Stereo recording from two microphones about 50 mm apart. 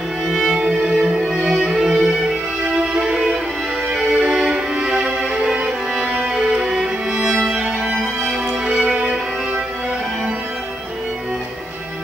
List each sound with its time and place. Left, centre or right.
0.3 s music: centre